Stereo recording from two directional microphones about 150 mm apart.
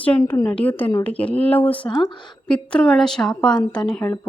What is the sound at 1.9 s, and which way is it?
Speech, 25° left (ahead or behind).